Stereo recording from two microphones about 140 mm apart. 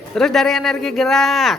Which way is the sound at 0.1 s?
Centre (ahead or behind).